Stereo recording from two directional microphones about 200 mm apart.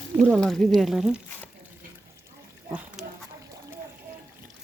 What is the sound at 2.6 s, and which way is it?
Pig, 10° right (ahead or behind).